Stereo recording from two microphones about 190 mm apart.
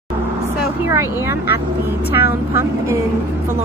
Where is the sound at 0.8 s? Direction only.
15° right (ahead or behind).